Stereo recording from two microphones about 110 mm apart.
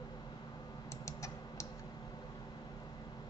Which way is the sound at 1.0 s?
30° left (ahead or behind).